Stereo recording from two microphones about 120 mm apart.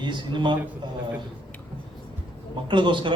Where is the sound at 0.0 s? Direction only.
40° right (ahead or behind).